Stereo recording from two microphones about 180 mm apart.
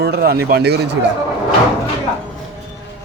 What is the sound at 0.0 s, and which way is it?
Speech, 60° right (ahead or behind).